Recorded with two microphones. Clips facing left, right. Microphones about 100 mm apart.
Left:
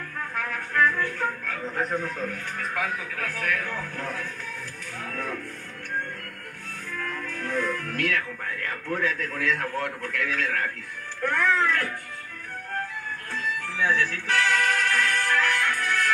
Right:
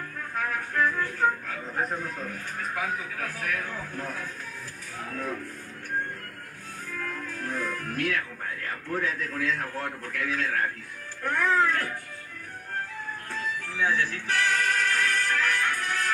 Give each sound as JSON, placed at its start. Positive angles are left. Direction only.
{"t": 0.7, "sound": "music", "side_deg": 60}
{"t": 3.2, "sound": "a man's voice", "side_deg": 60}
{"t": 7.2, "sound": "music", "side_deg": 65}
{"t": 8.6, "sound": "a man's voice", "side_deg": 60}
{"t": 13.6, "sound": "music", "side_deg": 60}